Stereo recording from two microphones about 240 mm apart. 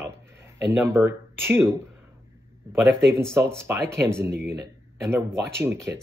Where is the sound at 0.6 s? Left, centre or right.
Centre.